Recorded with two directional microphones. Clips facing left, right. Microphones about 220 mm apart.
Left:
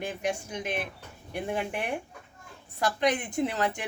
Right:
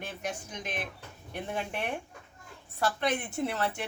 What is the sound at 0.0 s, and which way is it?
A woman's voice, 10° left (ahead or behind).